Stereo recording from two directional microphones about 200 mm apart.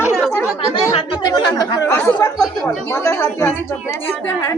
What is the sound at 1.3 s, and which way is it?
Speech, 15° left (ahead or behind).